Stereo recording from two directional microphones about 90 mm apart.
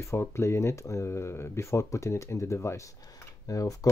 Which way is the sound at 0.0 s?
30° left (ahead or behind).